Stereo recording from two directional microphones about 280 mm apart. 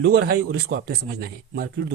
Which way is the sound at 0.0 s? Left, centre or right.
Right.